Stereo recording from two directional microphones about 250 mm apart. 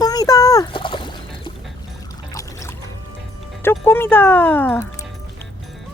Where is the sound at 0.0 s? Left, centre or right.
Centre.